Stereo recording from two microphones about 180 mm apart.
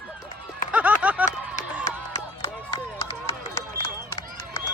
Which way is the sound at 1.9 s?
15° left (ahead or behind).